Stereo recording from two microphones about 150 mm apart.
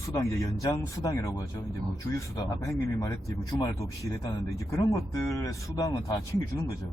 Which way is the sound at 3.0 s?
25° left (ahead or behind).